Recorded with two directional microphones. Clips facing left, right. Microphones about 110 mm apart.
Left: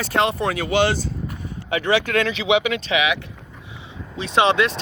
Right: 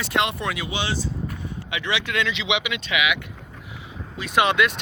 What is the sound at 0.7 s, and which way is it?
Speech, 60° left (ahead or behind).